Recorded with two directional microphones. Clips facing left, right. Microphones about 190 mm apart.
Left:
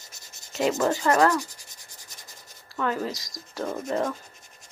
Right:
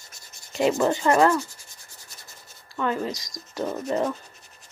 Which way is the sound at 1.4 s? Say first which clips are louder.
Right 2 dB; 15° left (ahead or behind).